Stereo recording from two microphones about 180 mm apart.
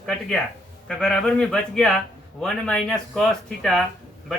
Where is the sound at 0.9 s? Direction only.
5° left (ahead or behind).